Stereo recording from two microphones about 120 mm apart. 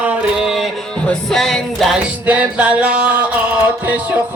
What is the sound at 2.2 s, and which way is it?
Music, 10° right (ahead or behind).